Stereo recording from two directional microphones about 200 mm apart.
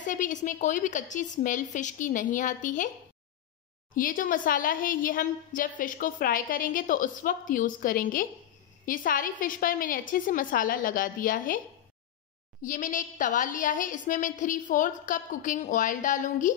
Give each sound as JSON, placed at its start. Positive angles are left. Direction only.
{"t": 0.0, "sound": "a woman's voice", "side_deg": 40}
{"t": 3.9, "sound": "a woman's voice", "side_deg": 45}
{"t": 12.6, "sound": "a woman's voice", "side_deg": 40}